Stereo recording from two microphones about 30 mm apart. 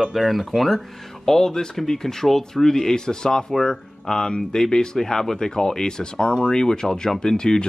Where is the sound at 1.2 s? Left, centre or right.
Centre.